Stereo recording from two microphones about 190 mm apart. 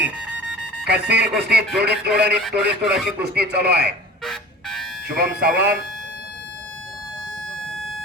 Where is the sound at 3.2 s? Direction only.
60° right (ahead or behind).